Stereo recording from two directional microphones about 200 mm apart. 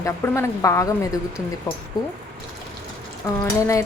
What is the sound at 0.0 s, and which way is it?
Speech, 15° left (ahead or behind).